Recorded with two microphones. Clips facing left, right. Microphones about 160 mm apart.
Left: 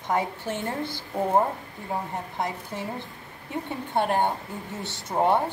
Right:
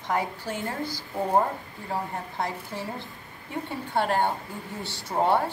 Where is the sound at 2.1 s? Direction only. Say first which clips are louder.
Left 1 dB; 20° left (ahead or behind).